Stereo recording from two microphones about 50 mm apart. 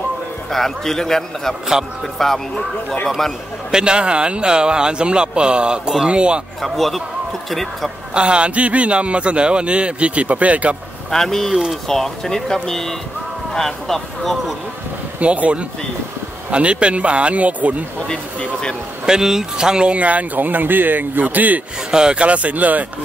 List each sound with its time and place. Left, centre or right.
0.5 s a man's voice: centre
3.7 s a man's voice: centre
6.6 s speech: centre
8.1 s a man's voice: right
11.1 s a man's voice: centre
15.1 s a man's voice: right
18.0 s a man's voice: centre
19.0 s speech: centre; by 21.5 s right
21.9 s speech: centre
22.2 s speech: right